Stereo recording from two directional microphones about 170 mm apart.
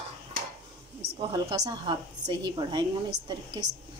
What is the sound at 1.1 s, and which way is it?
A woman's voice, 25° right (ahead or behind).